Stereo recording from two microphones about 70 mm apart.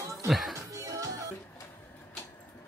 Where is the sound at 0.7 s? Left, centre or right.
Right.